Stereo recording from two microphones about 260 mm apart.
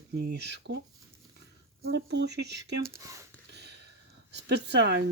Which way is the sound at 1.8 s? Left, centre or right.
Right.